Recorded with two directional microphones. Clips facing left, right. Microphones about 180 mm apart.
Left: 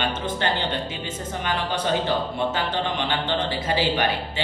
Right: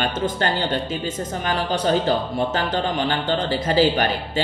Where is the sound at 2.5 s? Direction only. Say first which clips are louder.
Right 3 dB; 40° right (ahead or behind).